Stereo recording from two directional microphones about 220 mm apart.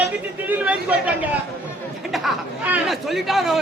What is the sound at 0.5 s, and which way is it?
Speech, 5° right (ahead or behind).